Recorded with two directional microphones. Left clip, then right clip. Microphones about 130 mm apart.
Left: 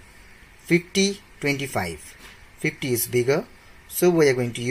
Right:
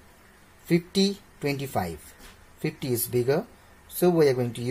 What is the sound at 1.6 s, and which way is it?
Speech, 5° left (ahead or behind).